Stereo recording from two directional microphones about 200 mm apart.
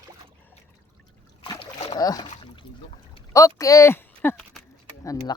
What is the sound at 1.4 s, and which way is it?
Boat, 25° left (ahead or behind).